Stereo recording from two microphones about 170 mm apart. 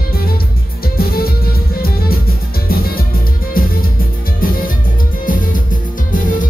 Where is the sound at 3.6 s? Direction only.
55° left (ahead or behind).